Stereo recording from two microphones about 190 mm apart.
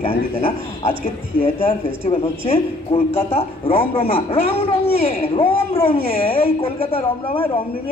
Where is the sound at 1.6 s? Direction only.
30° left (ahead or behind).